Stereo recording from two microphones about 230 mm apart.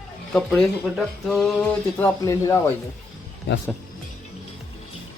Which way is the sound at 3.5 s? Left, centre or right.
Left.